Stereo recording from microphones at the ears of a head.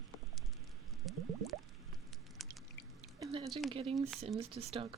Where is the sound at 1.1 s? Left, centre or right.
Right.